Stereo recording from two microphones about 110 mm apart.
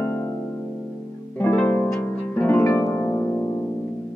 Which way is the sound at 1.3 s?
15° left (ahead or behind).